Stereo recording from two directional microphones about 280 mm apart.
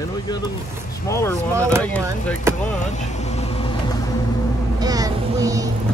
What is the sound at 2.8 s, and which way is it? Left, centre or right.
Vehicle, left.